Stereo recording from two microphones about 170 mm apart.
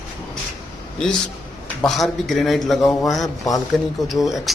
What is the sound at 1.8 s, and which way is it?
A man's voice, centre (ahead or behind).